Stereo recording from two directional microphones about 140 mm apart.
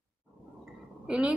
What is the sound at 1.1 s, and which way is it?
Speech, 10° right (ahead or behind).